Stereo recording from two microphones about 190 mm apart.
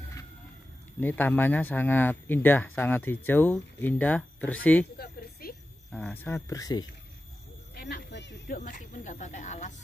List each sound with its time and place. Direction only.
1.0 s speech: 10° left (ahead or behind)
4.9 s a sound: 55° left (ahead or behind)
5.9 s speech: 5° left (ahead or behind)
7.7 s speech: 60° left (ahead or behind)
8.5 s speech: 40° left (ahead or behind)